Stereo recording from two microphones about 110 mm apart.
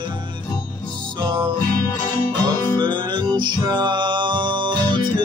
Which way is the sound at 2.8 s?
45° right (ahead or behind).